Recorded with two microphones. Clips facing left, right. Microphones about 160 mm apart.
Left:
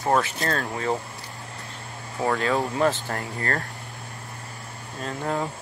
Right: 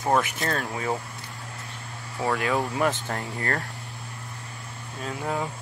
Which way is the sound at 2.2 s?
20° left (ahead or behind).